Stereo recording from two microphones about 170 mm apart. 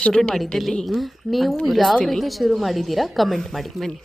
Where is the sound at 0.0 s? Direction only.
5° left (ahead or behind).